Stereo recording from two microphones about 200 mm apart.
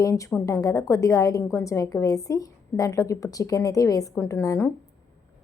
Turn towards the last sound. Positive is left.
turn(degrees=15)  # may be behind; listen again after turning